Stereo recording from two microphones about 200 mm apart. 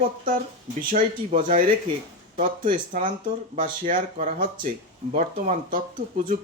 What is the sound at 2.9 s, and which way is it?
Speech, 40° right (ahead or behind).